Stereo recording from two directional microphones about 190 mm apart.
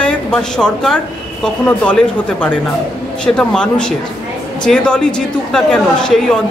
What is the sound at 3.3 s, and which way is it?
A man's voice, 5° left (ahead or behind).